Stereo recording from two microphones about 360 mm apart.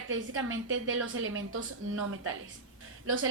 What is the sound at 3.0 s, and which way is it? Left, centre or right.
Speech, right.